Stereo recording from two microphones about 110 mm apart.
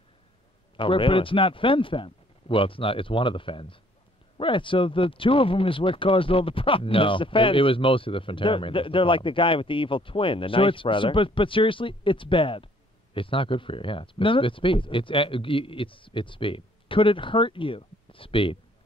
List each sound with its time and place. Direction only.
0.7 s speech: 50° left (ahead or behind)